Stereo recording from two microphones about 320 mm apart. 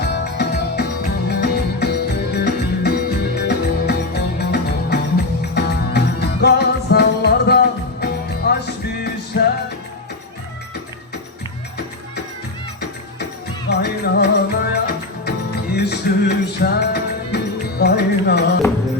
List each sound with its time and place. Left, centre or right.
0.0 s music: left
13.7 s music: left